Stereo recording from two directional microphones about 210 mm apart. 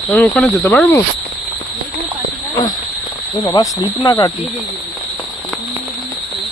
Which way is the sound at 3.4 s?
15° left (ahead or behind).